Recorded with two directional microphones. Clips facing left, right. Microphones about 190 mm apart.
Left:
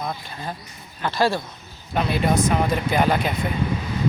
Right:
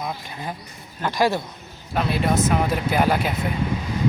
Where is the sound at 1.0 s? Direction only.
15° right (ahead or behind).